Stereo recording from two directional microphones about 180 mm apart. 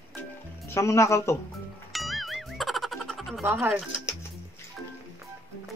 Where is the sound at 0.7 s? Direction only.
15° left (ahead or behind).